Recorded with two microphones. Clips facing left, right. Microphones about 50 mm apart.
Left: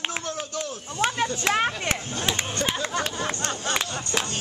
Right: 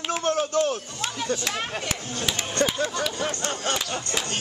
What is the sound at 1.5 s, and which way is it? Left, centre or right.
Speech, left.